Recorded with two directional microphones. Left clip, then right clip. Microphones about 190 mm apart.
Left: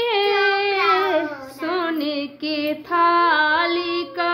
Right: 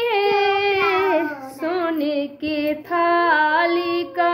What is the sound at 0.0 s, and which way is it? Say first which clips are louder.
Child singing: even; 10° right (ahead or behind).